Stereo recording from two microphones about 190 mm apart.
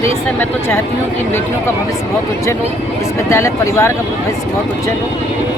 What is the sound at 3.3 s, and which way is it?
Speech, 15° left (ahead or behind).